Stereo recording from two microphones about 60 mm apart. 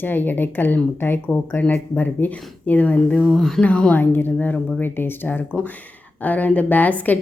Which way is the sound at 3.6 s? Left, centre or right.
Left.